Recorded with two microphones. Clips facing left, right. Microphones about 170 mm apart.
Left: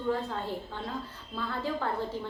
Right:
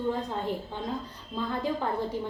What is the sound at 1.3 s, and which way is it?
Speech, 15° right (ahead or behind).